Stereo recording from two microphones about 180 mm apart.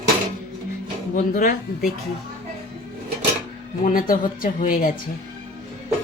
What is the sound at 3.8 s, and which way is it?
Speech, 50° left (ahead or behind).